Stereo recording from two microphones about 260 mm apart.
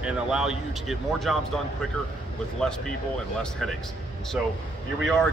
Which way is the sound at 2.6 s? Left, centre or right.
Centre.